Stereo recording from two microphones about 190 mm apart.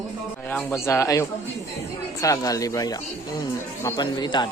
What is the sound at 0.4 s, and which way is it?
Speech, 15° left (ahead or behind).